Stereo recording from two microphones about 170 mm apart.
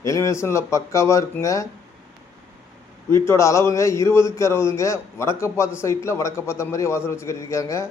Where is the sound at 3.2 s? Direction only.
15° left (ahead or behind).